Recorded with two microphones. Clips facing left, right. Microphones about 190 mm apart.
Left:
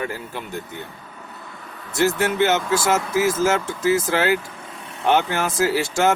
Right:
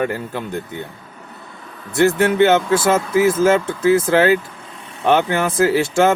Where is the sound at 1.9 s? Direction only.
55° right (ahead or behind).